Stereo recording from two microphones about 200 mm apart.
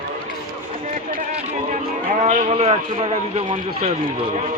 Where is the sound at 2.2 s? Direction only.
35° right (ahead or behind).